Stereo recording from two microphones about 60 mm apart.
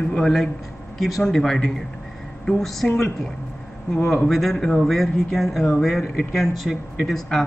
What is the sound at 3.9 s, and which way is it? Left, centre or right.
Speech, centre.